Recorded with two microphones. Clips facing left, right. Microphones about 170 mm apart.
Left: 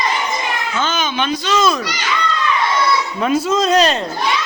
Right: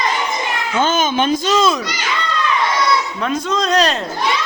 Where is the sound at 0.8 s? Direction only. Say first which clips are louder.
Right 5 dB; 50° right (ahead or behind).